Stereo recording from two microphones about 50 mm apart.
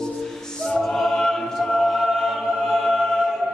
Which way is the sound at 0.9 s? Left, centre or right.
Centre.